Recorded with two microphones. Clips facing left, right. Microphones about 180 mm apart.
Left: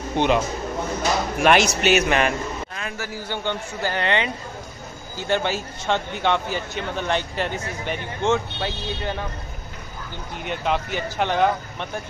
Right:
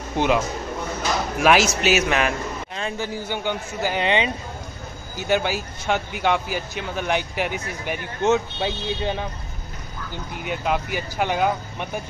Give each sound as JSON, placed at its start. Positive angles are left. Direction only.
{"t": 0.2, "sound": "speech", "side_deg": -5}
{"t": 1.4, "sound": "speech", "side_deg": 0}
{"t": 2.7, "sound": "speech", "side_deg": -20}
{"t": 5.1, "sound": "speech", "side_deg": -5}
{"t": 8.3, "sound": "speech", "side_deg": -20}
{"t": 10.4, "sound": "speech", "side_deg": -5}